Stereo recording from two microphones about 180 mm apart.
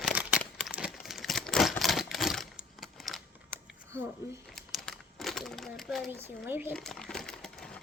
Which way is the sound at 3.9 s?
15° right (ahead or behind).